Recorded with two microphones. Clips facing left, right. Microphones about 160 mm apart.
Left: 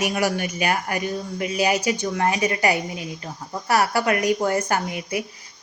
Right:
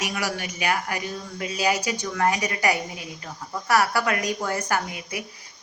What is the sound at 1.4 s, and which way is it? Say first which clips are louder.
A woman's voice: left 2 dB; 20° left (ahead or behind).